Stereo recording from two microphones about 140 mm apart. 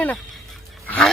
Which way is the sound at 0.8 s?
10° left (ahead or behind).